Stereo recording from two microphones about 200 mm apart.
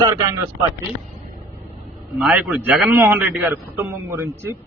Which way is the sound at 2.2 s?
10° right (ahead or behind).